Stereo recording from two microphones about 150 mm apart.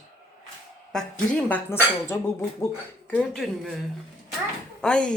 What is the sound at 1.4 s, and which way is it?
Speech, 15° left (ahead or behind).